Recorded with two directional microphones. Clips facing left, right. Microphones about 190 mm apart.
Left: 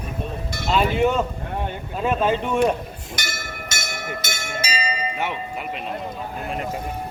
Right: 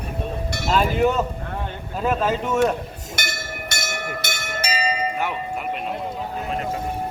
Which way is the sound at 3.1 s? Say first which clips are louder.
Right 2 dB; 60° right (ahead or behind).